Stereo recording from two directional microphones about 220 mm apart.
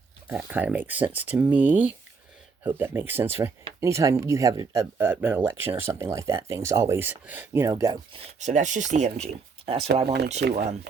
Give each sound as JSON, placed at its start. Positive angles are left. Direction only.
{"t": 0.3, "sound": "speech", "side_deg": -10}
{"t": 8.4, "sound": "speech", "side_deg": -35}
{"t": 10.4, "sound": "speech", "side_deg": -50}